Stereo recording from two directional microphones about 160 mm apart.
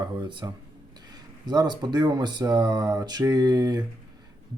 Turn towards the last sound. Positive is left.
turn(degrees=-25)  # may be behind; listen again after turning